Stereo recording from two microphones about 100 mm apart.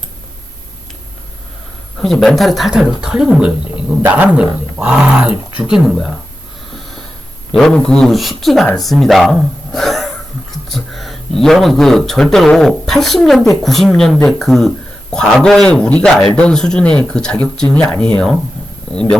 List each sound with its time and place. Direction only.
2.0 s speech: 5° left (ahead or behind)
7.5 s a man's voice: 5° left (ahead or behind)